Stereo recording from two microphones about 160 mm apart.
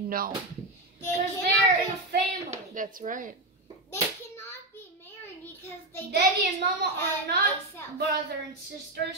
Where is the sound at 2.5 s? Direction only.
55° right (ahead or behind).